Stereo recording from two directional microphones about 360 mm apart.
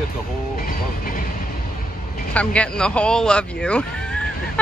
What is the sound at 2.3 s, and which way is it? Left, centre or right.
Speech, centre.